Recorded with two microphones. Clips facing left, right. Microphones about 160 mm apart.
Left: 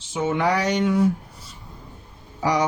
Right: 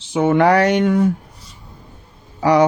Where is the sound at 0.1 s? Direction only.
60° right (ahead or behind).